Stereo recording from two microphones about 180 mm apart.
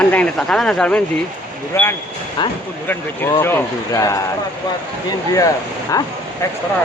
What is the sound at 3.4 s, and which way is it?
Speech, 15° left (ahead or behind).